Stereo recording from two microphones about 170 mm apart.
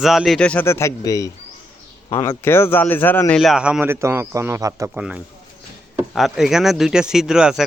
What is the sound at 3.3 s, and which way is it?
A man's voice, 5° right (ahead or behind).